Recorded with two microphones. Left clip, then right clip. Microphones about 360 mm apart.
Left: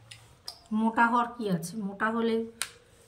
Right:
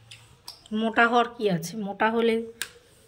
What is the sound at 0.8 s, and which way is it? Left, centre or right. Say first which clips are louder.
A woman's voice: right 4 dB; centre.